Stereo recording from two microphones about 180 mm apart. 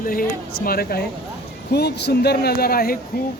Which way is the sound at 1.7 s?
65° left (ahead or behind).